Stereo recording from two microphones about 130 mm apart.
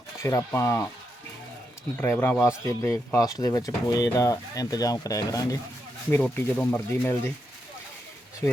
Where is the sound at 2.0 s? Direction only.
15° left (ahead or behind).